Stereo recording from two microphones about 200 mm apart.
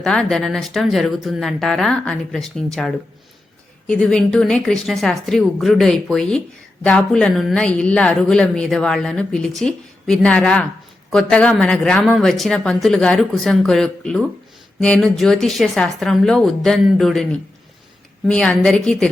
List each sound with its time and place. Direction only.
0.0 s a woman's voice: 5° left (ahead or behind)